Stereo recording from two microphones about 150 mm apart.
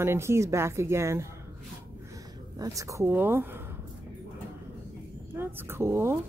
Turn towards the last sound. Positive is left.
turn(degrees=-15)  # may be behind; listen again after turning